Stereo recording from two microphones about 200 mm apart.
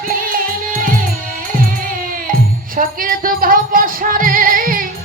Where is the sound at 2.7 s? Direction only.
45° right (ahead or behind).